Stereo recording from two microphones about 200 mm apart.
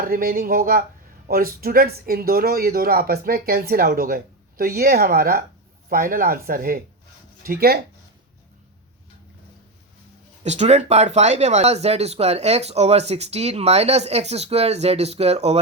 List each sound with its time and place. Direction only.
0.0 s speech: 45° right (ahead or behind)
10.4 s speech: 35° right (ahead or behind)